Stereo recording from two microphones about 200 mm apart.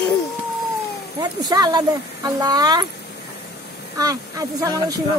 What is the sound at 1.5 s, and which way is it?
Speech, 20° right (ahead or behind).